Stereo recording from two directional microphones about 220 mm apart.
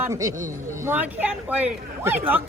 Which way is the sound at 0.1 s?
15° right (ahead or behind).